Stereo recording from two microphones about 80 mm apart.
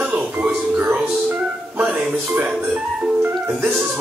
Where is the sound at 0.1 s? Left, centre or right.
Right.